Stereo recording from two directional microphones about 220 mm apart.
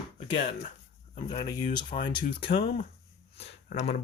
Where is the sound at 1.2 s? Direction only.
20° left (ahead or behind).